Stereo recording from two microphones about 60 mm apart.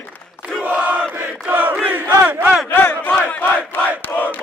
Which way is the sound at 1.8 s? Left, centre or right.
Right.